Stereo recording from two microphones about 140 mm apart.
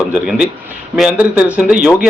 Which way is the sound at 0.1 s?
10° right (ahead or behind).